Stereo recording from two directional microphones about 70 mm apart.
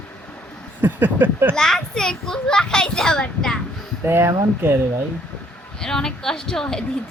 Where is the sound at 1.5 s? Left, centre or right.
Centre.